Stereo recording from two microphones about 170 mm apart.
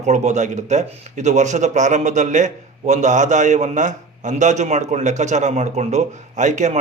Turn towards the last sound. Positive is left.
turn(degrees=-45)  # may be behind; listen again after turning